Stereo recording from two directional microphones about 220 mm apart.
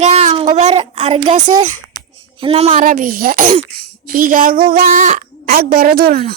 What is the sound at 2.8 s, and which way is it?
Speech, 40° right (ahead or behind).